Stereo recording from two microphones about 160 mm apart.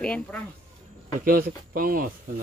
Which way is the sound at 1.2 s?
65° right (ahead or behind).